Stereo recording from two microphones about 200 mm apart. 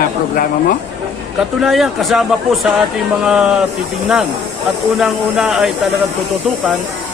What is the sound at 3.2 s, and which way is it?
Speech, 5° right (ahead or behind).